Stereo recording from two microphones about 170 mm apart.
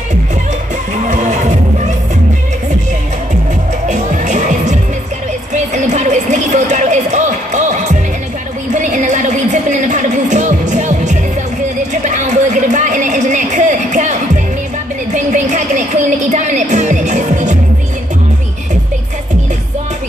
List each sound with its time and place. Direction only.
0.9 s music: 45° right (ahead or behind)
3.8 s music: 45° right (ahead or behind)
5.5 s a sound: 45° right (ahead or behind)
8.7 s music: 45° right (ahead or behind)
11.9 s a sound: 45° right (ahead or behind)
15.1 s music: 45° right (ahead or behind)